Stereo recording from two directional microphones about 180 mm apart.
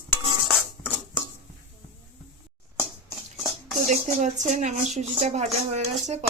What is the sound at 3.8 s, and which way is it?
Speech, 45° right (ahead or behind).